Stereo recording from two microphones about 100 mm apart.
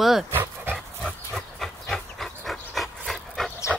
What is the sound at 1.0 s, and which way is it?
Dog, centre (ahead or behind).